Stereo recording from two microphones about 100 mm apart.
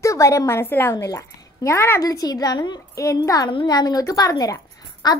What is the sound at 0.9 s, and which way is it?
A child's voice, 35° left (ahead or behind).